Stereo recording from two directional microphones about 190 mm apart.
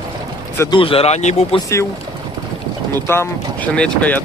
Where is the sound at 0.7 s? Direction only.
30° left (ahead or behind).